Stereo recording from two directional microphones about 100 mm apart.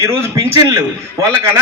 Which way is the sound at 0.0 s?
30° right (ahead or behind).